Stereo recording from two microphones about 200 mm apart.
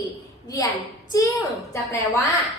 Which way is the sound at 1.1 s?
15° left (ahead or behind).